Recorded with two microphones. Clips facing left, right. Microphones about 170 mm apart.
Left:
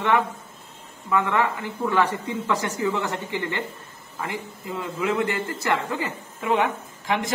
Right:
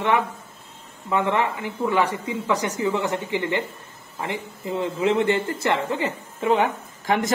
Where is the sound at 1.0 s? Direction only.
25° right (ahead or behind).